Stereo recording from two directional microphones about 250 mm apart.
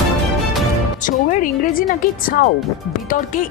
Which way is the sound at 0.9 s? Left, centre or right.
Left.